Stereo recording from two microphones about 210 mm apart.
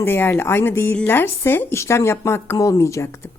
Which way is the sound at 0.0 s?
10° left (ahead or behind).